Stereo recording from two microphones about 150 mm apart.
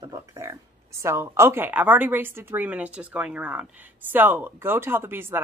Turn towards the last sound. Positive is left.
turn(degrees=-15)  # may be behind; listen again after turning